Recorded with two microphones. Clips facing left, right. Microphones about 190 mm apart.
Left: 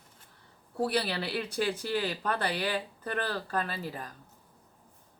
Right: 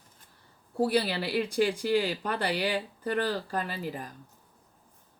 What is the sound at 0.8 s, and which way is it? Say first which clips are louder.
Speech: right 3 dB; 10° right (ahead or behind).